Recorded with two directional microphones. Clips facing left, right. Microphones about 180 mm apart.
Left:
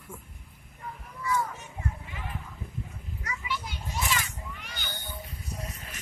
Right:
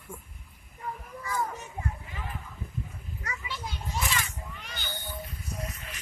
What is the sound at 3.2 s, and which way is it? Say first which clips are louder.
Children playing: left 4 dB; 30° right (ahead or behind).